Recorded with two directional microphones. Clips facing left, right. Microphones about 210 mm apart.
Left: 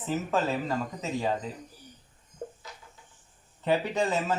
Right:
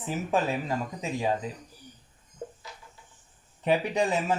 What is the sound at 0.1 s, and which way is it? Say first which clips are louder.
Speech: even; 15° right (ahead or behind).